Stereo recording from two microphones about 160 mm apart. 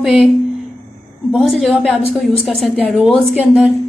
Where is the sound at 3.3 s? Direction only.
10° right (ahead or behind).